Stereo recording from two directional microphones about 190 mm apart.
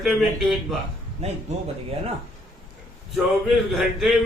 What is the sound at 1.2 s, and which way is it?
Speech, 35° right (ahead or behind).